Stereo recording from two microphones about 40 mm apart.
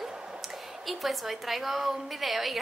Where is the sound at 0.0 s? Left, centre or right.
Centre.